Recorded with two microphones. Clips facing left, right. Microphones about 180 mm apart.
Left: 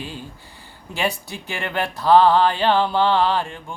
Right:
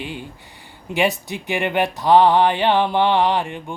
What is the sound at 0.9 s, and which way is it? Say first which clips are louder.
Speech: right 7 dB; 75° right (ahead or behind).